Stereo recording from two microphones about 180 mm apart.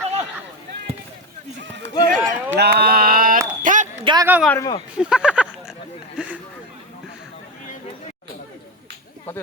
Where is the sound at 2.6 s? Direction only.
60° right (ahead or behind).